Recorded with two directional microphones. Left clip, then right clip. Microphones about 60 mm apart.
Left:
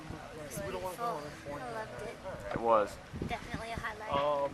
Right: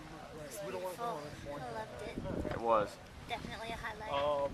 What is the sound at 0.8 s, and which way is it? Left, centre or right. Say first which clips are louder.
Speech: left 3 dB; centre.